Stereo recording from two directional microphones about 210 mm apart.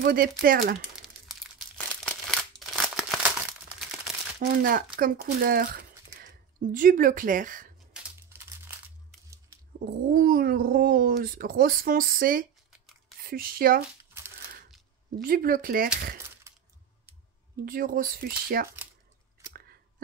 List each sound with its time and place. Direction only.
0.0 s speech: 45° right (ahead or behind)
2.0 s crumpling: 5° left (ahead or behind)
4.4 s speech: 40° right (ahead or behind)
7.9 s crumpling: 10° right (ahead or behind)
10.1 s speech: 45° right (ahead or behind)
15.2 s speech: 45° right (ahead or behind)
17.6 s speech: 40° right (ahead or behind)
19.4 s a sound: 15° right (ahead or behind)